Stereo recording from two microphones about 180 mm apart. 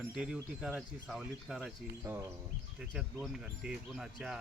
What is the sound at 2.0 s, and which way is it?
Speech, 15° right (ahead or behind).